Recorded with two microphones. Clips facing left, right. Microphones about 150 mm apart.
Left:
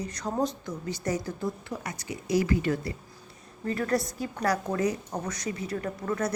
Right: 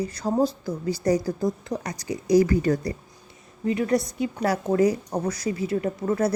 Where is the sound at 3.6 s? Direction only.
15° right (ahead or behind).